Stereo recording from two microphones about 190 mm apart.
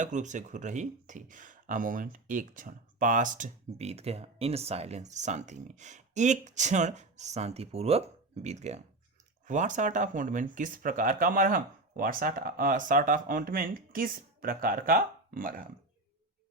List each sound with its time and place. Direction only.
0.0 s speech: 40° right (ahead or behind)